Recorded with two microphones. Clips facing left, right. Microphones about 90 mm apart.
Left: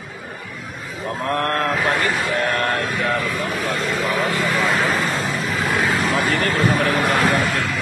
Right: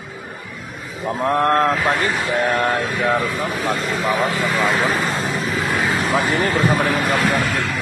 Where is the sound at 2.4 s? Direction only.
10° right (ahead or behind).